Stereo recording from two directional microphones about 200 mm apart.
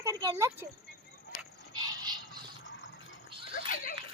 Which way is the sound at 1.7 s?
20° right (ahead or behind).